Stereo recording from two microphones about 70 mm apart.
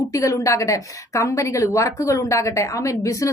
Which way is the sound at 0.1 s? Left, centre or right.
Left.